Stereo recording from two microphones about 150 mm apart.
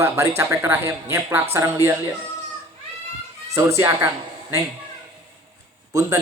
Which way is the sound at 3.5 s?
20° right (ahead or behind).